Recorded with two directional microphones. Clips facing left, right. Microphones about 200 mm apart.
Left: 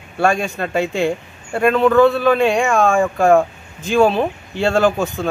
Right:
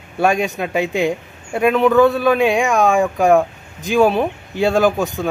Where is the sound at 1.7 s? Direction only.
15° right (ahead or behind).